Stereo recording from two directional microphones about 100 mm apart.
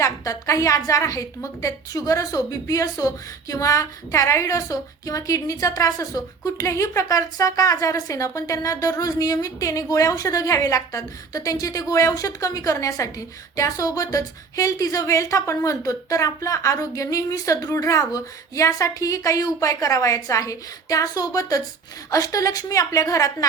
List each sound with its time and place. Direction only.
0.0 s a woman's voice: 30° left (ahead or behind)